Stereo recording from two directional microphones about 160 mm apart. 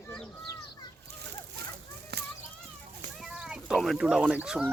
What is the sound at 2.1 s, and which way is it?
Children playing, 85° right.